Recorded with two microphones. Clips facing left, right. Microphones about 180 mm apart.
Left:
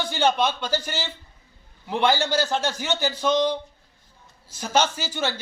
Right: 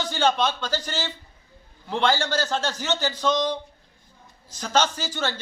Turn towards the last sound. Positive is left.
turn(degrees=10)  # may be behind; listen again after turning